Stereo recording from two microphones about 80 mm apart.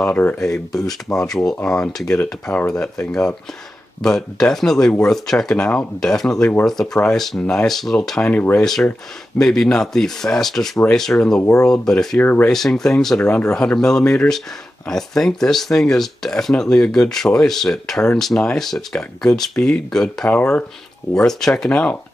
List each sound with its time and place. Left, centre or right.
0.1 s speech: left
0.4 s speech: centre
8.3 s speech: left
9.4 s speech: centre
12.2 s speech: left
12.4 s speech: centre
20.2 s speech: centre
21.3 s speech: centre
21.6 s speech: centre